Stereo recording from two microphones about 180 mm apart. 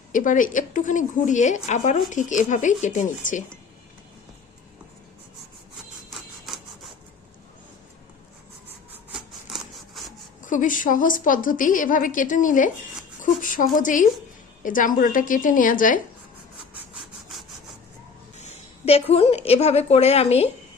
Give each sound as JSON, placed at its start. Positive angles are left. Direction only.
{"t": 0.1, "sound": "speech", "side_deg": 45}
{"t": 6.1, "sound": "a sound", "side_deg": 0}
{"t": 8.9, "sound": "rub", "side_deg": 0}
{"t": 10.4, "sound": "speech", "side_deg": 45}
{"t": 18.3, "sound": "a woman's voice", "side_deg": 40}